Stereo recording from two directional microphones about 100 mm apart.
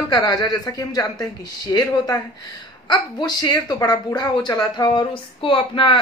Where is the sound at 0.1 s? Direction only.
40° left (ahead or behind).